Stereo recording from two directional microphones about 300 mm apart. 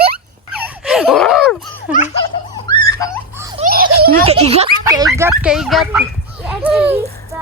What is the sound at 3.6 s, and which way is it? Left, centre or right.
Giggle, right.